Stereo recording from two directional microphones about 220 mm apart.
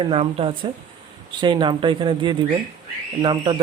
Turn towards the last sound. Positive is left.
turn(degrees=-20)  # may be behind; listen again after turning